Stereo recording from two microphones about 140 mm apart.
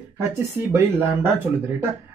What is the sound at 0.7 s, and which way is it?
Speech, 15° right (ahead or behind).